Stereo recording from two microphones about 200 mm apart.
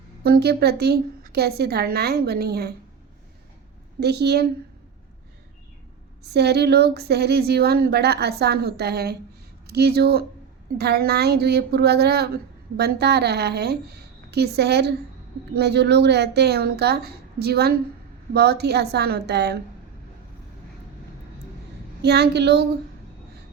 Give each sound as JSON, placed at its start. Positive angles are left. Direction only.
{"t": 0.2, "sound": "speech", "side_deg": -50}
{"t": 4.0, "sound": "a woman's voice", "side_deg": -55}
{"t": 6.3, "sound": "a woman's voice", "side_deg": -55}
{"t": 22.0, "sound": "a woman's voice", "side_deg": -55}